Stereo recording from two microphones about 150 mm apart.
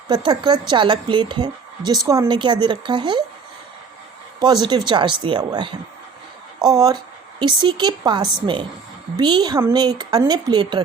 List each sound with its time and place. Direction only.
0.1 s a woman's voice: 30° right (ahead or behind)
4.9 s a woman's voice: 30° right (ahead or behind)